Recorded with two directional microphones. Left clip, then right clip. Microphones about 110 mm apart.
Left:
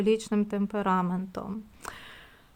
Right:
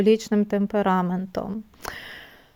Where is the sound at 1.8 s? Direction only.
40° right (ahead or behind).